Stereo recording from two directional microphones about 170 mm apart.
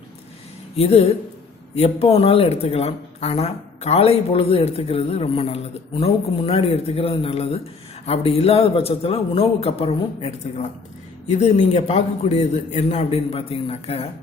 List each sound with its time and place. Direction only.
0.8 s speech: 35° left (ahead or behind)